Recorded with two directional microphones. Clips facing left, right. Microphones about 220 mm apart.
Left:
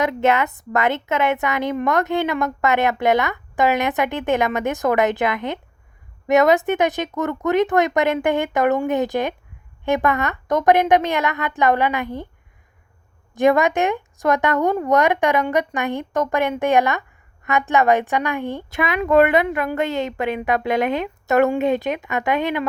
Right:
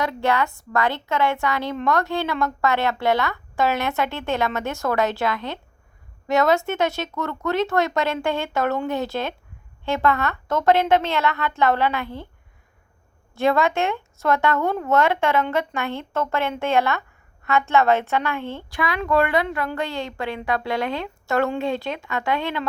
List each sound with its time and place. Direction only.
0.0 s a woman's voice: 20° left (ahead or behind)
13.3 s a woman's voice: 15° left (ahead or behind)